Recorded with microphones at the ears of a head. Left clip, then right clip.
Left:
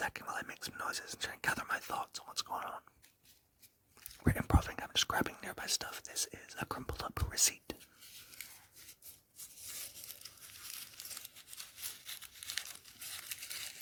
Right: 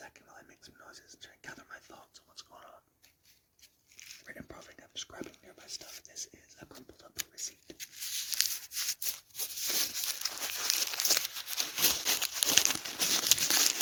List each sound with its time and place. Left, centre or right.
0.0 s whispering: left
4.2 s speech: left
7.8 s a sound: right